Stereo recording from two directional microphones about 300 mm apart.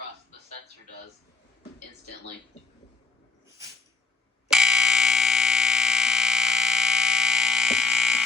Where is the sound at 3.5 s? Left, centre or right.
Centre.